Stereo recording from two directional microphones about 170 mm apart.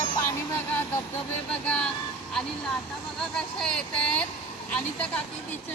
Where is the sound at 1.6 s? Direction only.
5° left (ahead or behind).